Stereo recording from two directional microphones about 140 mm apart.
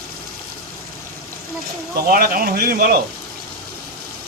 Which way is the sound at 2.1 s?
90° right.